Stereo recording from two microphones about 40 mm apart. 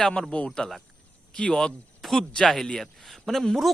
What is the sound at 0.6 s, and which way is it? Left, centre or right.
Speech, left.